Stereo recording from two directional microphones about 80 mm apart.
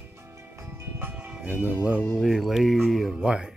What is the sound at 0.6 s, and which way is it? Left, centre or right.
Music, right.